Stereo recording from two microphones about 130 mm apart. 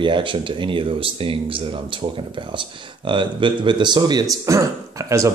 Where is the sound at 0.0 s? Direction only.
40° right (ahead or behind).